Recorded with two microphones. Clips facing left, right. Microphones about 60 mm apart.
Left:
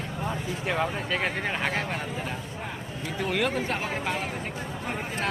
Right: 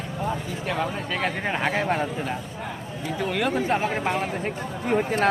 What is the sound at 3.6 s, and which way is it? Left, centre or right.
Speech, centre.